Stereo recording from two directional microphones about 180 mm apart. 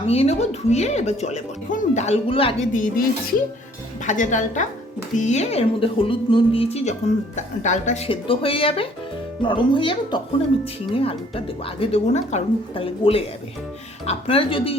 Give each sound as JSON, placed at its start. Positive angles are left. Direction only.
{"t": 0.0, "sound": "speech", "side_deg": 35}
{"t": 2.7, "sound": "a woman's voice", "side_deg": 50}
{"t": 4.0, "sound": "a woman's voice", "side_deg": 40}